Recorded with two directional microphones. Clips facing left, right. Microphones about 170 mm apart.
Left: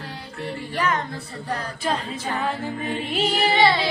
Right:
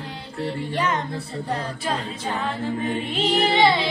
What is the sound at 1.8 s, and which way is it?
A capella, centre (ahead or behind).